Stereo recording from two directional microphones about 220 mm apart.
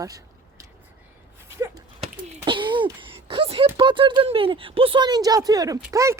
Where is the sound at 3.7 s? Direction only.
20° right (ahead or behind).